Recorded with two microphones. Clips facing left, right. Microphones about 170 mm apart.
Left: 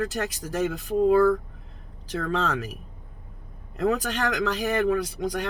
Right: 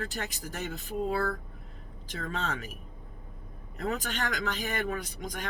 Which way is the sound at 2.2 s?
75° left (ahead or behind).